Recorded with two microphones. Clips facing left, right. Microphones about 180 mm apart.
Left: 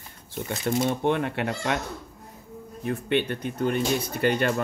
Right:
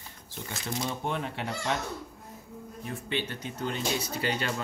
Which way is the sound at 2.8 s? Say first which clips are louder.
Left 9 dB; 60° left (ahead or behind).